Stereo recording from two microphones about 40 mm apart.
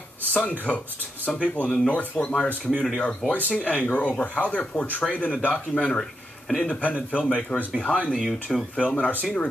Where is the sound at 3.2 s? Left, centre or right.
Right.